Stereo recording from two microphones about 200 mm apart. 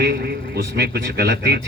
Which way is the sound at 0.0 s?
55° right (ahead or behind).